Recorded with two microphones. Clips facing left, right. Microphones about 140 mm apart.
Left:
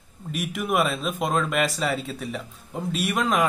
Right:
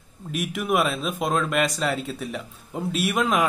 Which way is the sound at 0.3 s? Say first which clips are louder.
Right 1 dB; centre (ahead or behind).